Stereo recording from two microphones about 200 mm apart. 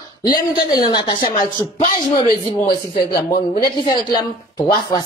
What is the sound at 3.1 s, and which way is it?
Speech, 50° left (ahead or behind).